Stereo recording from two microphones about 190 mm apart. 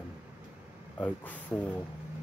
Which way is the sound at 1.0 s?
10° left (ahead or behind).